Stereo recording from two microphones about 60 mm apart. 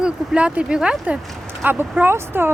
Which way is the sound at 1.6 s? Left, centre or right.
Right.